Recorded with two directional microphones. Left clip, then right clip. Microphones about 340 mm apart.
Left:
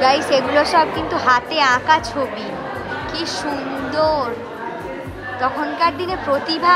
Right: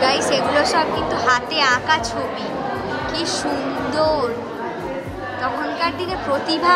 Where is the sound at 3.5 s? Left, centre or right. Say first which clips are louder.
Right 1 dB; centre.